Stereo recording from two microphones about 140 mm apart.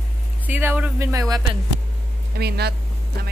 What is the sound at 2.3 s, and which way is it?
Speech, 90° right.